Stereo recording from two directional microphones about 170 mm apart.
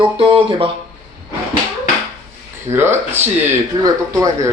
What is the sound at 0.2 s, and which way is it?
Speech, 30° right (ahead or behind).